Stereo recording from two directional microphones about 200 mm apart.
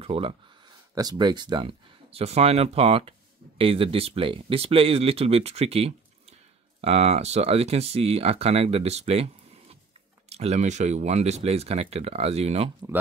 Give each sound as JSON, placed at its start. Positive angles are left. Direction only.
{"t": 0.0, "sound": "speech", "side_deg": -30}